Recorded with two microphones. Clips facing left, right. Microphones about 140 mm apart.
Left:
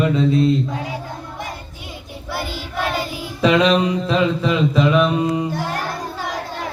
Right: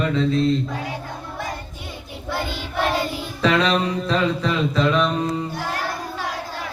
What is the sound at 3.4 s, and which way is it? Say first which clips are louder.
Mantra: left 4 dB; 10° left (ahead or behind).